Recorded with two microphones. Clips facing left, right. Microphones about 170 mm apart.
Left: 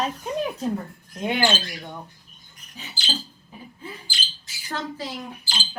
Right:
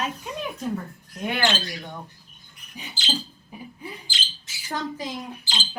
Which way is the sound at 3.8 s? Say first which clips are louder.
Left 2 dB; 20° right (ahead or behind).